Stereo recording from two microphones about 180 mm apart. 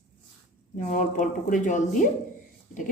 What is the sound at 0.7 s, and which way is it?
A woman's voice, 45° left (ahead or behind).